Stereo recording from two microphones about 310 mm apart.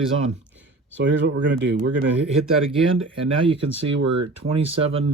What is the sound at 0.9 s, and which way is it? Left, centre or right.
Speech, right.